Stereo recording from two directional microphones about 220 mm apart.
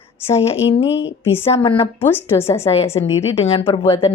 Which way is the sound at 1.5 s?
25° left (ahead or behind).